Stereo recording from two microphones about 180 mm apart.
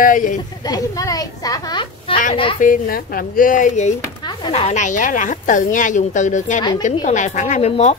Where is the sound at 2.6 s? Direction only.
50° left (ahead or behind).